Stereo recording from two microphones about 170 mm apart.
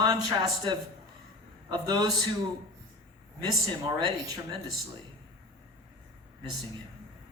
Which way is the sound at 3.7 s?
25° right (ahead or behind).